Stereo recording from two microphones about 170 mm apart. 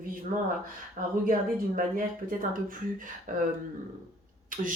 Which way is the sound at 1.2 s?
55° right (ahead or behind).